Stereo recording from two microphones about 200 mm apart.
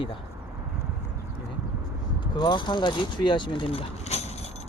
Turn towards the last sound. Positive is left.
turn(degrees=30)  # may be behind; listen again after turning